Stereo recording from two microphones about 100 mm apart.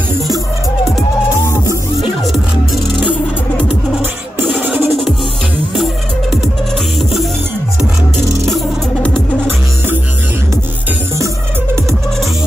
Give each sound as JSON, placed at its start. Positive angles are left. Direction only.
{"t": 2.0, "sound": "music", "side_deg": 0}
{"t": 4.6, "sound": "music", "side_deg": -15}
{"t": 7.0, "sound": "music", "side_deg": 0}